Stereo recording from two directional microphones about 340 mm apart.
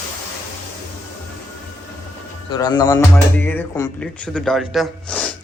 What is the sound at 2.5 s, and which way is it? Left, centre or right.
Speech, centre.